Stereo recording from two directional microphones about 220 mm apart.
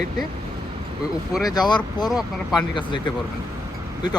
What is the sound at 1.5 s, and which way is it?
Speech, 20° left (ahead or behind).